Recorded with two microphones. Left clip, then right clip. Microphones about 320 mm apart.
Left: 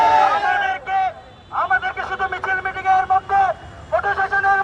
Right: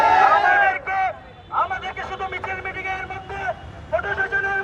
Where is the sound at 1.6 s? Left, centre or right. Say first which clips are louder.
Left 4 dB; centre.